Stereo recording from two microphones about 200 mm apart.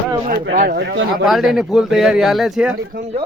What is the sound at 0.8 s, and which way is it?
Speech, 65° right (ahead or behind).